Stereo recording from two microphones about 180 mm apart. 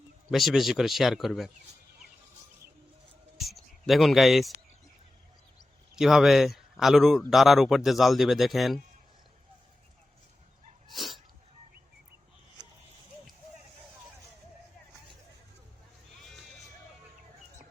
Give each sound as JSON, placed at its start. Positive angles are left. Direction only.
{"t": 0.3, "sound": "speech", "side_deg": 0}
{"t": 3.3, "sound": "a sound", "side_deg": 0}
{"t": 6.0, "sound": "speech", "side_deg": 0}
{"t": 10.8, "sound": "sneeze", "side_deg": 0}